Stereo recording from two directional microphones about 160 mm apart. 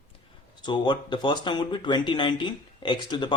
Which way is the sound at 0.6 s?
30° left (ahead or behind).